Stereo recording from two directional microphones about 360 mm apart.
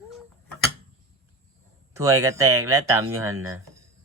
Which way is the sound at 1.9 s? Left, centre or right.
Centre.